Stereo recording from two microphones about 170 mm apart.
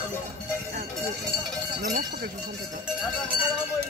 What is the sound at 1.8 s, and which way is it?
Cowbell, 65° right (ahead or behind).